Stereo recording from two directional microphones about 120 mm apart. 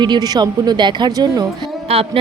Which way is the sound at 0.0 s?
35° right (ahead or behind).